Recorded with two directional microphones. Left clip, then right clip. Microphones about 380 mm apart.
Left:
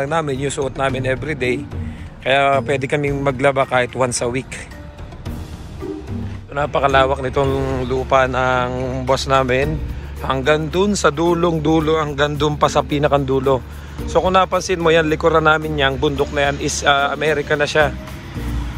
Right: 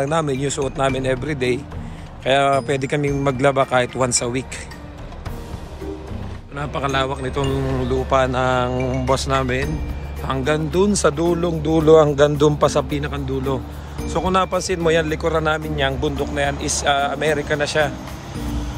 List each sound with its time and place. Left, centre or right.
0.0 s speech: centre
6.5 s speech: centre